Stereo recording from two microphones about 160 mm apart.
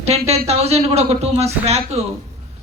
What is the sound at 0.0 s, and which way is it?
Speech, 40° right (ahead or behind).